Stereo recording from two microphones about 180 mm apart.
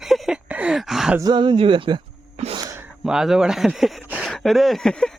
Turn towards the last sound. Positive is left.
turn(degrees=5)  # may be behind; listen again after turning